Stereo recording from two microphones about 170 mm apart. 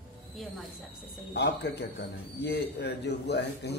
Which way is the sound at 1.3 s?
80° left.